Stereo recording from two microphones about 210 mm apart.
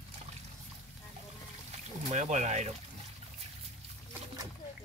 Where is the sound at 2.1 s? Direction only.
35° right (ahead or behind).